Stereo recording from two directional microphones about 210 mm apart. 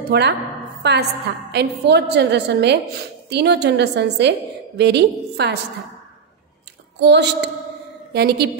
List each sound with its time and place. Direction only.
0.1 s a woman's voice: 50° right (ahead or behind)
7.0 s a woman's voice: 55° right (ahead or behind)